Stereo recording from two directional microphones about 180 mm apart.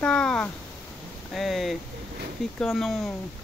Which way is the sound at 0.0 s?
5° left (ahead or behind).